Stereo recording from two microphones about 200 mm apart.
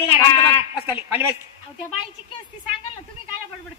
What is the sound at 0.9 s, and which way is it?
Speech, 10° right (ahead or behind).